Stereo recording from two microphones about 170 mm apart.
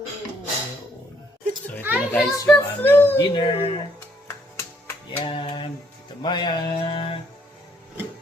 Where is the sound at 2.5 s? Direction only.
10° left (ahead or behind).